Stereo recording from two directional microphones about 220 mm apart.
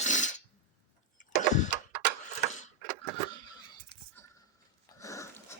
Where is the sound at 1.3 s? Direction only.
35° left (ahead or behind).